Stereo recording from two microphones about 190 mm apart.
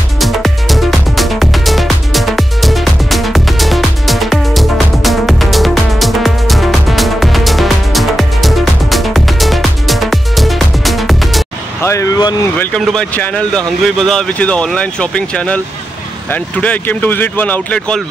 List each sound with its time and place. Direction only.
0.2 s music: centre (ahead or behind)
11.8 s speech: 15° left (ahead or behind)
12.5 s speech: 5° left (ahead or behind)